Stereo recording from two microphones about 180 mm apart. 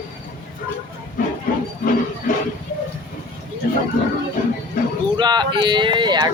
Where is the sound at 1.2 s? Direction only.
50° left (ahead or behind).